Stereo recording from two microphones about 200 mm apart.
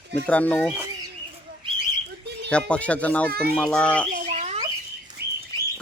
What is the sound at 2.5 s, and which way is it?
Speech, 5° left (ahead or behind).